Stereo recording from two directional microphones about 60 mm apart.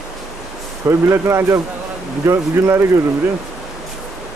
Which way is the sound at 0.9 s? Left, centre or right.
Right.